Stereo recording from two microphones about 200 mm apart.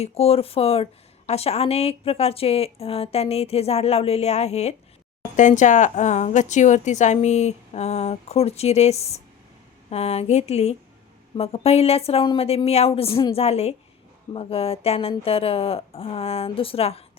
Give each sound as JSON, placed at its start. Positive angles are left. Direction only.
{"t": 0.0, "sound": "a woman's voice", "side_deg": 30}